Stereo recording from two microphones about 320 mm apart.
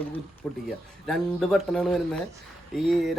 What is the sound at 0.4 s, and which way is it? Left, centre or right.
Speech, centre.